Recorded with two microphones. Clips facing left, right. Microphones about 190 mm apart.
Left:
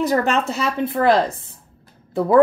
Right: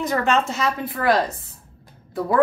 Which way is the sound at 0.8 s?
25° left (ahead or behind).